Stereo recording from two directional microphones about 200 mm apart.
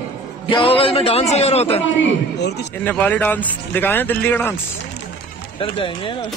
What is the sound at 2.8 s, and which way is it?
Speech, 10° left (ahead or behind).